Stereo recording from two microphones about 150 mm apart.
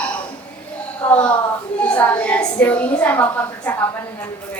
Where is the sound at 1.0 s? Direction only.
10° left (ahead or behind).